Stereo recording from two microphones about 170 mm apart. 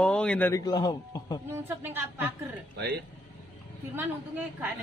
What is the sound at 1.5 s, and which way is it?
A woman's voice, 15° right (ahead or behind).